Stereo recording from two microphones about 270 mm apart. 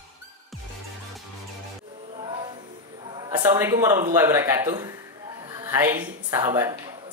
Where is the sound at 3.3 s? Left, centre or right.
Centre.